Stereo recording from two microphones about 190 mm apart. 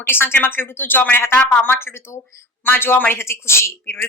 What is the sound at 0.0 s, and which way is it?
A woman's voice, 10° left (ahead or behind).